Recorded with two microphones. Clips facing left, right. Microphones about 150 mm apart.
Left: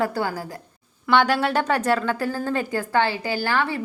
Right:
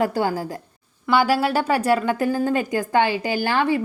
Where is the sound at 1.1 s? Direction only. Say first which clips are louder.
Right 1 dB; 5° right (ahead or behind).